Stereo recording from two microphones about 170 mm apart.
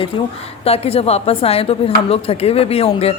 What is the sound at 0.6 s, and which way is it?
A woman's voice, 35° left (ahead or behind).